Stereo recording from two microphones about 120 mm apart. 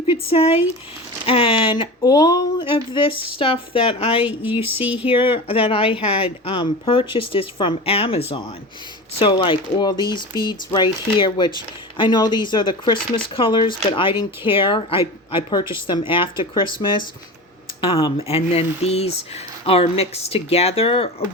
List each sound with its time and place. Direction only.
0.1 s speech: 55° left (ahead or behind)
4.4 s speech: 15° right (ahead or behind)
5.1 s speech: 50° left (ahead or behind)